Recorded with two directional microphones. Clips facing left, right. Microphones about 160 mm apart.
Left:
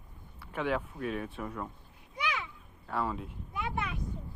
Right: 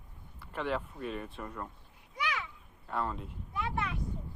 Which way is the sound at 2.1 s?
25° left (ahead or behind).